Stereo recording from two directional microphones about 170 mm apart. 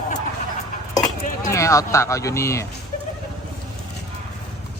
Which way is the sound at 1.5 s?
15° left (ahead or behind).